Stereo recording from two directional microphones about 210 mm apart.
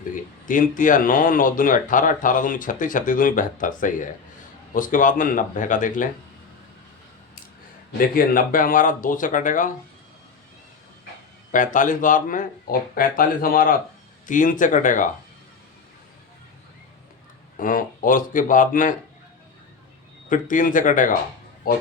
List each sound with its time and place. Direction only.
0.4 s speech: 40° left (ahead or behind)
7.9 s speech: 40° left (ahead or behind)
11.5 s speech: 40° left (ahead or behind)
17.6 s speech: 40° left (ahead or behind)
20.3 s speech: 40° left (ahead or behind)